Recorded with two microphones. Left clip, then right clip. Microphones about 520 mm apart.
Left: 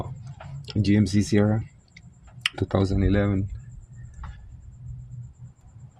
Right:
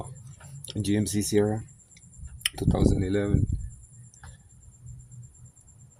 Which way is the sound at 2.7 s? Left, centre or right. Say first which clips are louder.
Left 2 dB; centre.